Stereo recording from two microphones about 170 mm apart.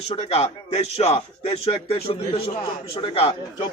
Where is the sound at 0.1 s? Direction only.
30° left (ahead or behind).